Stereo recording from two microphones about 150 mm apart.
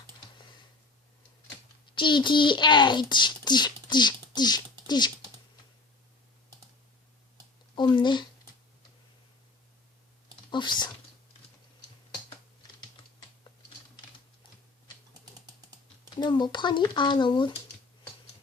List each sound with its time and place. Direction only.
2.0 s a child's voice: 30° left (ahead or behind)
4.4 s a sound: 30° left (ahead or behind)
7.8 s a child's voice: 30° left (ahead or behind)
10.5 s a child's voice: 30° left (ahead or behind)
15.2 s typing: 25° right (ahead or behind)
16.2 s a child's voice: 30° left (ahead or behind)